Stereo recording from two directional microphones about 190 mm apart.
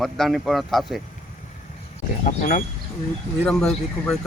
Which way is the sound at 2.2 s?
45° left (ahead or behind).